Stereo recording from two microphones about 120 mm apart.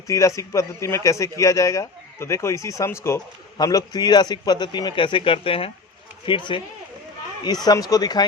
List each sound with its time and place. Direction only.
0.1 s a man's voice: 25° left (ahead or behind)